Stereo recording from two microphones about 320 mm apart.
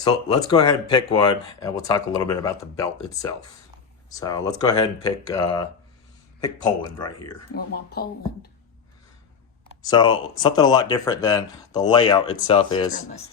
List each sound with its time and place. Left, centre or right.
0.0 s speech: centre
7.5 s speech: left
9.8 s speech: centre